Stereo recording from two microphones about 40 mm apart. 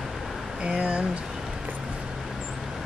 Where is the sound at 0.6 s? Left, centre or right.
Right.